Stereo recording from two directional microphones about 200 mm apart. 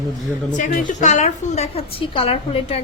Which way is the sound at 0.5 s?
40° left (ahead or behind).